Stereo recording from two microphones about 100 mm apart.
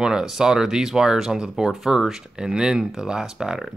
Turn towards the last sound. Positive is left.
turn(degrees=-5)  # may be behind; listen again after turning